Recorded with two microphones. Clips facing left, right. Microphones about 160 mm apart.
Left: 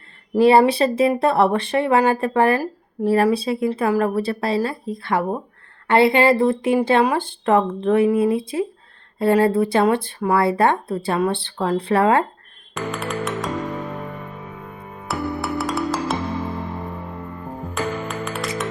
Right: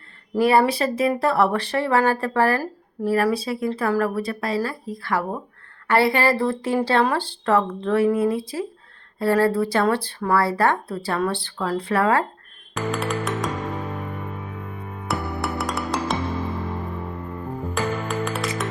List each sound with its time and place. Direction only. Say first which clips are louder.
0.3 s a woman's voice: left 4 dB; 25° left (ahead or behind)
12.7 s music: right 1 dB; centre (ahead or behind)
15.0 s music: left 2 dB; centre (ahead or behind)
17.7 s music: even; centre (ahead or behind)